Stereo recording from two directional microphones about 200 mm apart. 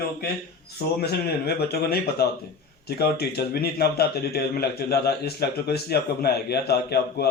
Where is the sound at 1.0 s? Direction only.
50° left (ahead or behind).